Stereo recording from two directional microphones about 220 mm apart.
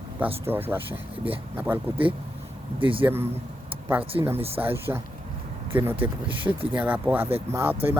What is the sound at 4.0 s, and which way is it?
Speech, 25° right (ahead or behind).